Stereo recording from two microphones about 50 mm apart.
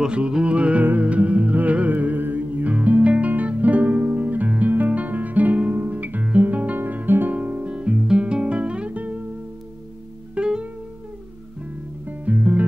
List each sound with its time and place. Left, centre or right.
0.0 s music: centre
6.8 s guitar: right
7.3 s guitar: right
10.3 s music: centre
12.1 s music: right